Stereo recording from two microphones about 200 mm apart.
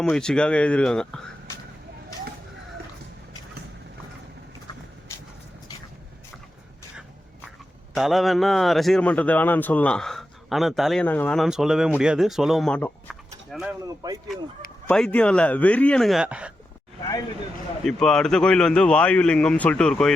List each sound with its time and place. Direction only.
0.0 s a man's voice: 5° left (ahead or behind)
7.9 s a man's voice: centre (ahead or behind)
13.8 s a man's voice: 20° right (ahead or behind)
14.8 s a man's voice: 5° left (ahead or behind)
17.8 s a man's voice: 5° left (ahead or behind)